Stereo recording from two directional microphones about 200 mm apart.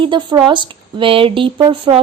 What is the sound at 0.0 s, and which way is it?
Speech, 25° right (ahead or behind).